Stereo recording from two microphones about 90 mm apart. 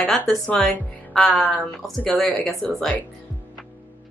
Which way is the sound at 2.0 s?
15° left (ahead or behind).